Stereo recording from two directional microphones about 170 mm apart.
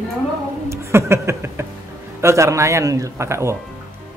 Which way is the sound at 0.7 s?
15° right (ahead or behind).